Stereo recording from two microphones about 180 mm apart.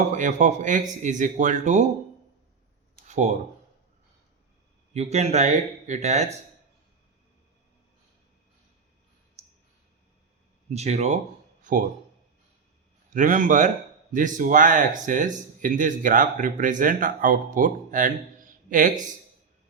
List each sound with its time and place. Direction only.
0.1 s speech: 45° right (ahead or behind)
3.1 s speech: 40° right (ahead or behind)
4.9 s speech: 35° right (ahead or behind)
10.7 s speech: 40° right (ahead or behind)
13.1 s speech: 45° right (ahead or behind)